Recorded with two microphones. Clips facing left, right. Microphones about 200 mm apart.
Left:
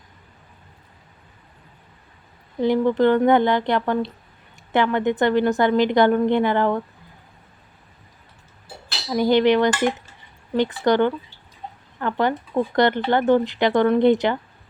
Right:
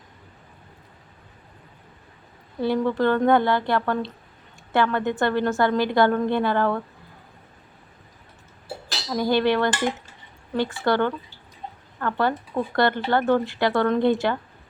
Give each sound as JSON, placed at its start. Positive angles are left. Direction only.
{"t": 2.6, "sound": "a woman's voice", "side_deg": 15}
{"t": 9.0, "sound": "a woman's voice", "side_deg": 20}